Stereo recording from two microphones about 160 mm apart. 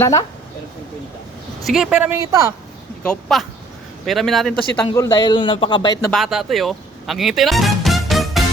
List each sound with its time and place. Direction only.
0.0 s a man's voice: 20° left (ahead or behind)
1.6 s a man's voice: 5° right (ahead or behind)
2.1 s a woman's voice: 20° right (ahead or behind)
3.0 s a man's voice: 5° left (ahead or behind)
4.9 s a man's voice: 25° left (ahead or behind)
6.1 s speech: centre (ahead or behind)